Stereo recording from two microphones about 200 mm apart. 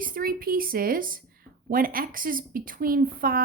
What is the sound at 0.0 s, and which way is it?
A woman's voice, 45° right (ahead or behind).